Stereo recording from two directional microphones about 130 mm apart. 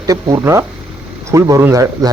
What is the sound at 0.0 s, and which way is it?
A man's voice, 25° right (ahead or behind).